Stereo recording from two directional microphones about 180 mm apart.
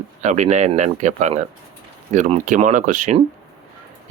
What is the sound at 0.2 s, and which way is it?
Speech, 40° right (ahead or behind).